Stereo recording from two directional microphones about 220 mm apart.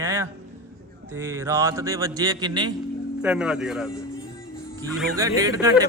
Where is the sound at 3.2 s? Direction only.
5° right (ahead or behind).